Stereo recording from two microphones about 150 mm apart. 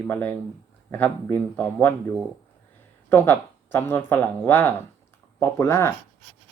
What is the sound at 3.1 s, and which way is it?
Speech, 15° left (ahead or behind).